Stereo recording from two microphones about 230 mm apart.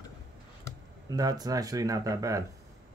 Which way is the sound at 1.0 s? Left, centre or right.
Centre.